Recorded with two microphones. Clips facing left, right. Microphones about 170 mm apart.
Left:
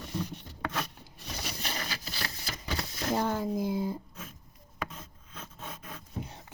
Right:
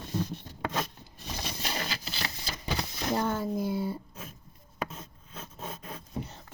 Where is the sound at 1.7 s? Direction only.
30° right (ahead or behind).